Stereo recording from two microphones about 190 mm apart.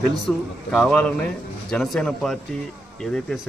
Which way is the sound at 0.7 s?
5° left (ahead or behind).